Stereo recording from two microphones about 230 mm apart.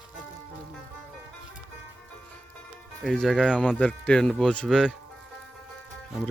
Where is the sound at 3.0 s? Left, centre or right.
Centre.